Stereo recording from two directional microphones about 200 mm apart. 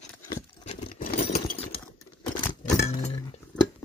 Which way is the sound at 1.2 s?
30° left (ahead or behind).